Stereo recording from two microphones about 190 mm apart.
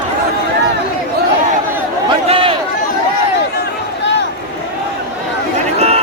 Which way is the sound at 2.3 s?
30° right (ahead or behind).